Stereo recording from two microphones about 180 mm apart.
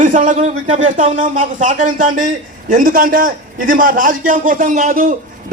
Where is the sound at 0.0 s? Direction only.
45° right (ahead or behind).